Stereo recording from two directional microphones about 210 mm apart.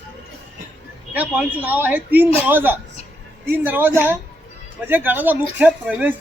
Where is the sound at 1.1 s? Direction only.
5° right (ahead or behind).